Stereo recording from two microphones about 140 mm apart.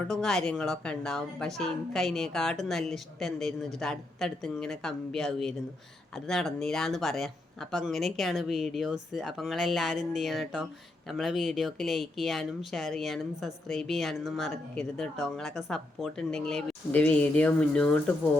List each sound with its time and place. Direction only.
0.1 s speech: 5° left (ahead or behind)